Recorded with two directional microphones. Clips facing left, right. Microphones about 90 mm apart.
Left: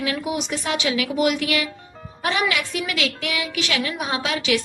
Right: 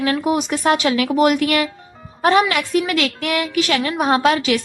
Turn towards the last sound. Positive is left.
turn(degrees=-45)  # may be behind; listen again after turning